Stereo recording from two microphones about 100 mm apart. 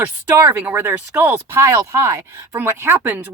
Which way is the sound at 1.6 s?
30° right (ahead or behind).